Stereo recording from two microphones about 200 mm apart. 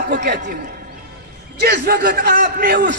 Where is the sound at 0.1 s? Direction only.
55° right (ahead or behind).